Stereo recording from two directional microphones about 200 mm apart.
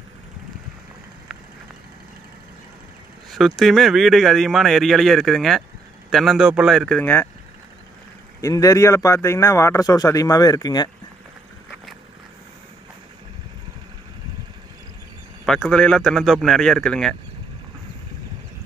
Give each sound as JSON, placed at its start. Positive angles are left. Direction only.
{"t": 3.3, "sound": "speech", "side_deg": 0}
{"t": 8.4, "sound": "a man's voice", "side_deg": 15}
{"t": 15.4, "sound": "speech", "side_deg": 5}